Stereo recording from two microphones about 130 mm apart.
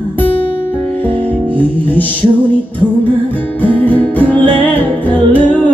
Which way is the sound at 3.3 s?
15° left (ahead or behind).